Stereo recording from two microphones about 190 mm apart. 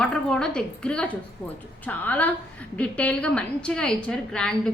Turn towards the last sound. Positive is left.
turn(degrees=5)  # may be behind; listen again after turning